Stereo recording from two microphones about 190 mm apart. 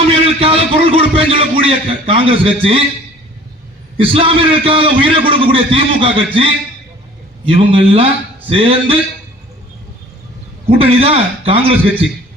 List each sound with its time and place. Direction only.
0.1 s a man's voice: 30° right (ahead or behind)
3.9 s a man's voice: 30° right (ahead or behind)
10.7 s a man's voice: 30° right (ahead or behind)